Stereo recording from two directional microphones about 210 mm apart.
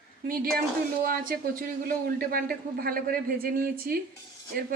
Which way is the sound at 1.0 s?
40° right (ahead or behind).